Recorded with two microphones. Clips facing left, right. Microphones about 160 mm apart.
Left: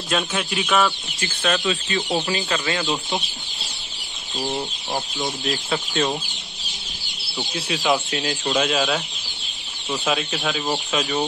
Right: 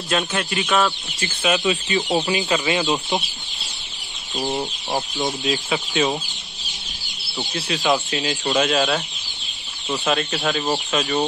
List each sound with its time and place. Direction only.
0.1 s speech: centre (ahead or behind)
1.6 s speech: 15° right (ahead or behind)
4.4 s speech: 20° right (ahead or behind)
5.5 s speech: centre (ahead or behind)
7.5 s speech: centre (ahead or behind)